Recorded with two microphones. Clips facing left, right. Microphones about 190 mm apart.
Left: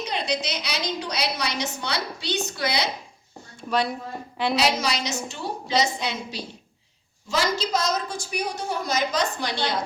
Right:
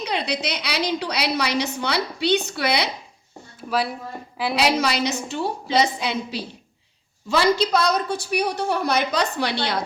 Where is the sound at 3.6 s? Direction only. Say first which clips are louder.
Even; 5° right (ahead or behind).